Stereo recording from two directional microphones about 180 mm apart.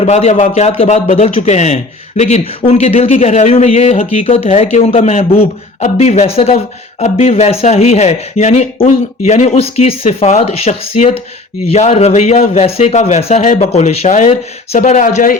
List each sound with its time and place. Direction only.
0.0 s a man's voice: 35° left (ahead or behind)